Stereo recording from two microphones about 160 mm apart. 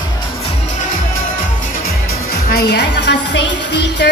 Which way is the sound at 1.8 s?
70° left (ahead or behind).